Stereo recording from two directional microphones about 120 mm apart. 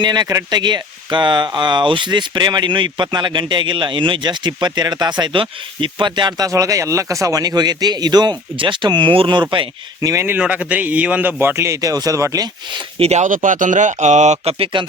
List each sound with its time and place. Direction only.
0.0 s speech: 35° right (ahead or behind)
10.0 s a man's voice: 25° right (ahead or behind)
10.3 s a man's voice: 10° right (ahead or behind); by 12.8 s 30° right (ahead or behind)
13.0 s speech: 70° right (ahead or behind)